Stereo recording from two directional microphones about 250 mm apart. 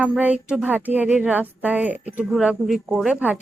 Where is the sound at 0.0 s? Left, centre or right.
Centre.